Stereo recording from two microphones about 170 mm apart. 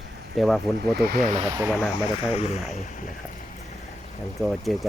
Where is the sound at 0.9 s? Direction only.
65° right (ahead or behind).